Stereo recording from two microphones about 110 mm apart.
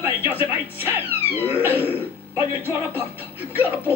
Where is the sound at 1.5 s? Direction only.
15° right (ahead or behind).